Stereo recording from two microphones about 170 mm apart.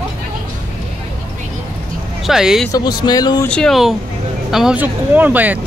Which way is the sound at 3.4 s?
5° left (ahead or behind).